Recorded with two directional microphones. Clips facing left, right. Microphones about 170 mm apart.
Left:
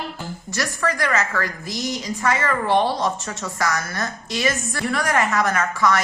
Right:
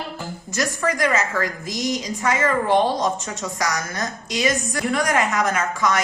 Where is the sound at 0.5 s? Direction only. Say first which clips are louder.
Right 2 dB; 20° right (ahead or behind).